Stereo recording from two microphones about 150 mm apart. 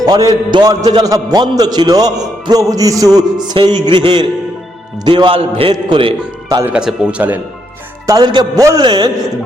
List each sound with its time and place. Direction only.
0.0 s a man's voice: 25° right (ahead or behind)
6.6 s speech: 10° right (ahead or behind)
8.0 s a man's voice: 25° right (ahead or behind)